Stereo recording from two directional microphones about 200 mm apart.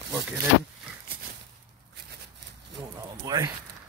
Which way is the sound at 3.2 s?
20° right (ahead or behind).